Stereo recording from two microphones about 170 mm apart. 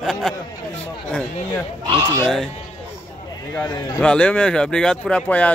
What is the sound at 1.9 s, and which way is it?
Speech, 25° right (ahead or behind).